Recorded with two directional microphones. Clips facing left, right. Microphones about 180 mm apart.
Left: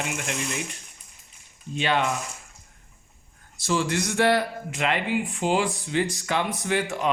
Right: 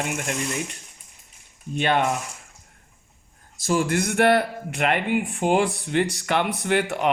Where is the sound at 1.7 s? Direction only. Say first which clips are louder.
Right 3 dB; 50° right (ahead or behind).